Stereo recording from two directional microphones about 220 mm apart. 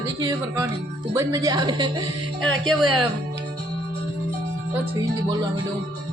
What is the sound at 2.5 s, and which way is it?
Speech, centre (ahead or behind).